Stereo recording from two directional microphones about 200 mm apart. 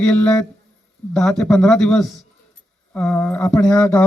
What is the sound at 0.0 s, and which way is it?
A man's voice, 5° left (ahead or behind).